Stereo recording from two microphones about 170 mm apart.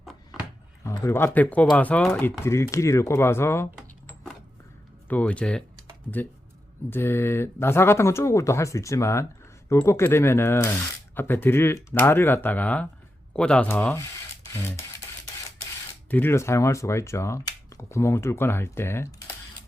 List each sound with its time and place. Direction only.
0.9 s speech: 15° left (ahead or behind)
3.8 s a sound: centre (ahead or behind)
5.0 s speech: 10° left (ahead or behind)
6.9 s speech: 15° left (ahead or behind)
16.0 s speech: 10° left (ahead or behind)